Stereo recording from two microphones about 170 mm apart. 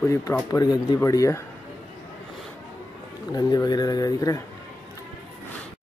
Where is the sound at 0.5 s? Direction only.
25° left (ahead or behind).